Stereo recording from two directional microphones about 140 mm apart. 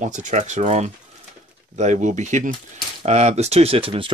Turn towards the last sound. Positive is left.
turn(degrees=-40)  # may be behind; listen again after turning